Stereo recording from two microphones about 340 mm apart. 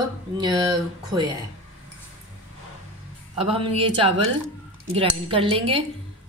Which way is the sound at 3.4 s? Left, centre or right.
Centre.